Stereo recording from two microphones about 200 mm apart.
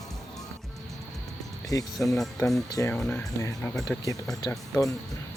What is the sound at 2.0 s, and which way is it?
Speech, centre (ahead or behind).